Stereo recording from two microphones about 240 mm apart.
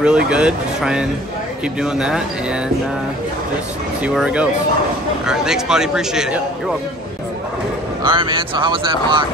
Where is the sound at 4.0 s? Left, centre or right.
Centre.